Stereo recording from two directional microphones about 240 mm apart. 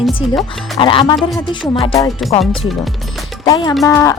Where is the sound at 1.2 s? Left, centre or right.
Centre.